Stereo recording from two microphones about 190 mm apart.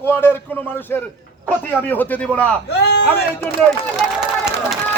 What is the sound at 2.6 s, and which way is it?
Speech, 60° left (ahead or behind).